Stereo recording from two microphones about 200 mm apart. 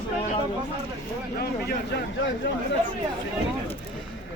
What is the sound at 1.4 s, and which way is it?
Speech, 55° left (ahead or behind).